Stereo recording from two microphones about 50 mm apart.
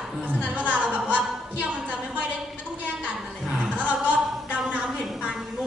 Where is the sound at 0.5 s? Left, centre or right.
Right.